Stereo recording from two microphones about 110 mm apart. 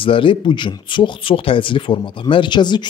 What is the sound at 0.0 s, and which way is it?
Speech, 50° left (ahead or behind).